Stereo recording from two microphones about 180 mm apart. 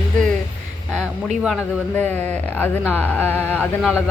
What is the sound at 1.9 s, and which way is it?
Speech, 10° left (ahead or behind).